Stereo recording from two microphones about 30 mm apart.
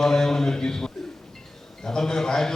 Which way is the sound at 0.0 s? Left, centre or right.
Centre.